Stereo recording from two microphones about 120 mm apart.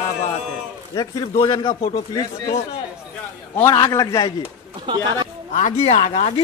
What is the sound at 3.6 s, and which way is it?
Speech, 30° left (ahead or behind).